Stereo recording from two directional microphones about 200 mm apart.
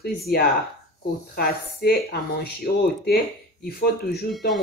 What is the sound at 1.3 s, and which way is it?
Speech, 50° left (ahead or behind).